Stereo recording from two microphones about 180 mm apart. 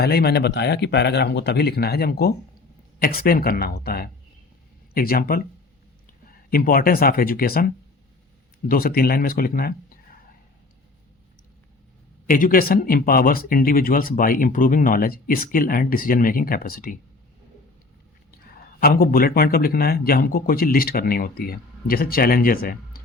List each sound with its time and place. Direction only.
0.0 s a man's voice: 60° left (ahead or behind)
12.3 s speech: 50° left (ahead or behind)
18.5 s a man's voice: 55° left (ahead or behind)